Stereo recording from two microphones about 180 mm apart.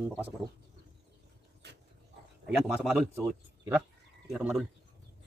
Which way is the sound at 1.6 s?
70° right (ahead or behind).